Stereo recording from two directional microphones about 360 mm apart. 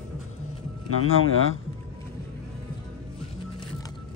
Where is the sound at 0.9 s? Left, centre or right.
Left.